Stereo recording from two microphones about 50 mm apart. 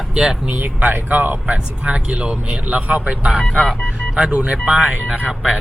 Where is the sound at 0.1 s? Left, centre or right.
Centre.